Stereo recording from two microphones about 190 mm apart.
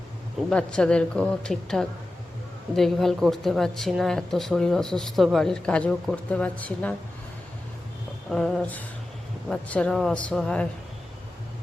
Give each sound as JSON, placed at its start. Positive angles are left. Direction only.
{"t": 0.5, "sound": "speech", "side_deg": 5}
{"t": 8.3, "sound": "speech", "side_deg": 0}